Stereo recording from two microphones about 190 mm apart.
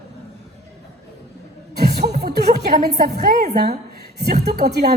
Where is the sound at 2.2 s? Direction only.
60° right (ahead or behind).